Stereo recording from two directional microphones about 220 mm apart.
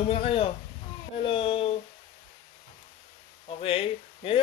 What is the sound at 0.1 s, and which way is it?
Speech, 25° left (ahead or behind).